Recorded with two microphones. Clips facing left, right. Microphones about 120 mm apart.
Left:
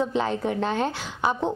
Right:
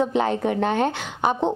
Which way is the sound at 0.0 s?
60° right (ahead or behind).